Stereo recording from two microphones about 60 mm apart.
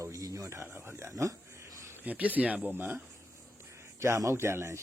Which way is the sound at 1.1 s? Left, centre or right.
Right.